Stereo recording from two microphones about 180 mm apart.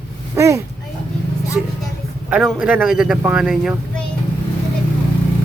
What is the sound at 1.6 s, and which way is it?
A man's voice, 5° right (ahead or behind).